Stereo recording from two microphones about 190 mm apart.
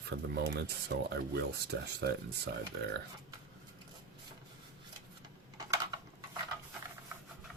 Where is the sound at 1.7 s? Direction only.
70° right (ahead or behind).